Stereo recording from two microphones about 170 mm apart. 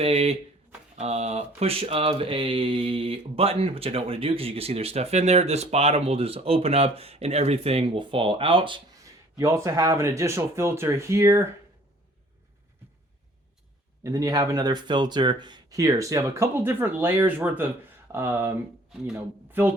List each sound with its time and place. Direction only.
0.0 s speech: 35° right (ahead or behind)
9.4 s speech: 20° right (ahead or behind)
14.0 s speech: 20° right (ahead or behind)